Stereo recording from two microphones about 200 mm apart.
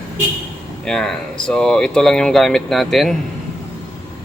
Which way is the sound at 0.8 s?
5° left (ahead or behind).